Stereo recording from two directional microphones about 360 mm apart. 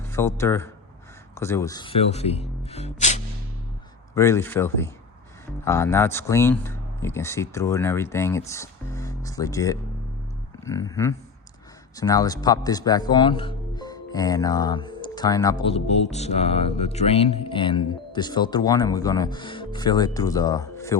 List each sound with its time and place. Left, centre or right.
0.1 s speech: centre
4.1 s speech: centre